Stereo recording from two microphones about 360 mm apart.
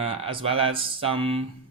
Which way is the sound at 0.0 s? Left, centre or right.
Centre.